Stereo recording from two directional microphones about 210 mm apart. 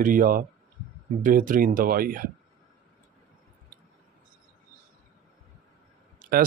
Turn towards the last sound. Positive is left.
turn(degrees=-40)  # may be behind; listen again after turning